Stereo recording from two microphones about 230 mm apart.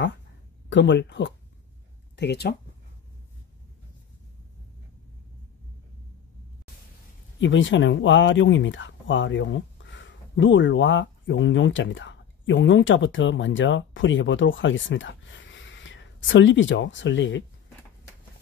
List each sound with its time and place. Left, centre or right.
0.7 s speech: left
7.3 s speech: left